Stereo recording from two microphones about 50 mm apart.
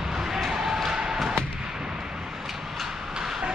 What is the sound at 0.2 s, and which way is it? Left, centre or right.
Basketball bounce, centre.